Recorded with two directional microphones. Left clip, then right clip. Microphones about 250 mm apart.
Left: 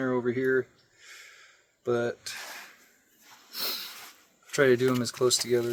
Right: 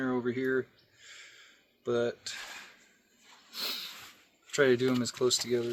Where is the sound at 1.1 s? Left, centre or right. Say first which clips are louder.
Left 2 dB; centre.